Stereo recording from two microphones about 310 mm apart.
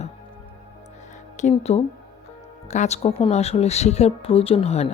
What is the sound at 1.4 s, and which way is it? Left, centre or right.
Speech, left.